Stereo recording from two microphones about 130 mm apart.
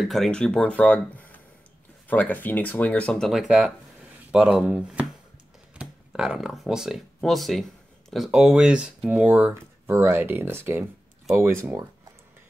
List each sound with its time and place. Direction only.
0.0 s speech: centre (ahead or behind)
9.5 s speech: 20° right (ahead or behind)